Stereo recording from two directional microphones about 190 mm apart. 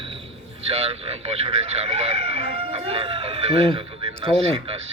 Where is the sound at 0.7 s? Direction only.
30° right (ahead or behind).